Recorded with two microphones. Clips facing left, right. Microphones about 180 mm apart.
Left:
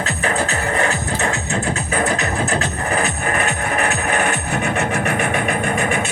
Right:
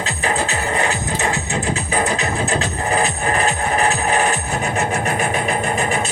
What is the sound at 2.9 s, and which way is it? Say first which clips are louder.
Music: right 2 dB; 35° right (ahead or behind).